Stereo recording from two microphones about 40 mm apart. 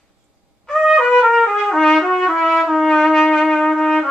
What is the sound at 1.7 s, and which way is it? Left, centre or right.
Trumpet, centre.